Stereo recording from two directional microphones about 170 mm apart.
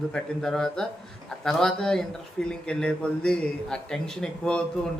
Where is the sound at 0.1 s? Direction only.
5° left (ahead or behind).